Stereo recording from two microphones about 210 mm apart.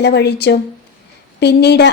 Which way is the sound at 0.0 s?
55° left (ahead or behind).